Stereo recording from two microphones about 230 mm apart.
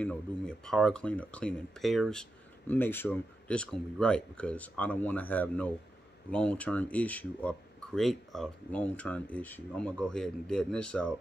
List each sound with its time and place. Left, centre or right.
0.0 s speech: centre